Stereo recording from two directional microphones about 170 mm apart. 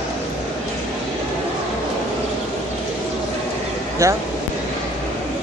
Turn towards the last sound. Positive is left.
turn(degrees=-20)  # may be behind; listen again after turning